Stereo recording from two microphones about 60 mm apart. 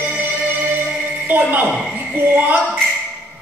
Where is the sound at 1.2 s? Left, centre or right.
Right.